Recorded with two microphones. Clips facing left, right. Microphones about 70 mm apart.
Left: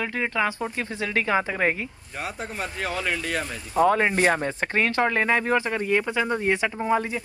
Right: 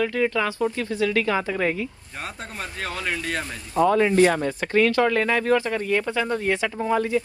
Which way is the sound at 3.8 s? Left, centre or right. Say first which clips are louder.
Right 2 dB; left.